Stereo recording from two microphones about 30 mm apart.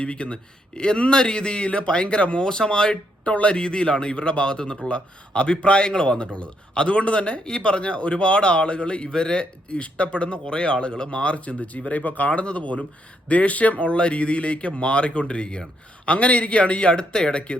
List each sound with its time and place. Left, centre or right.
0.0 s a man's voice: left
3.2 s a man's voice: left
3.6 s a man's voice: left
5.8 s a man's voice: left